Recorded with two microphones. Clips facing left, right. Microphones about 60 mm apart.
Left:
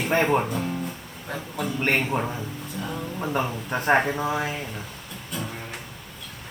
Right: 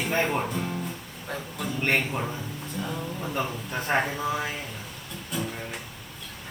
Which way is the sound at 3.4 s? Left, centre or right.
Left.